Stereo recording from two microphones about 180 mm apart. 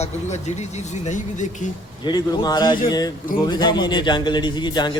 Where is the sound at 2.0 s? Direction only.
25° left (ahead or behind).